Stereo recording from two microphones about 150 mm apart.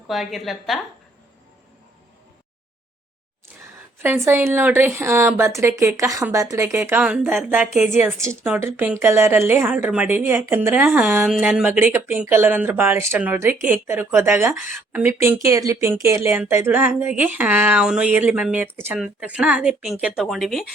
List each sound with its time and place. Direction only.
0.1 s a woman's voice: centre (ahead or behind)
4.0 s a woman's voice: 15° right (ahead or behind)